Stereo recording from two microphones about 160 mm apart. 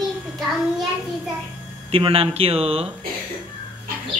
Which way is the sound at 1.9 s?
35° right (ahead or behind).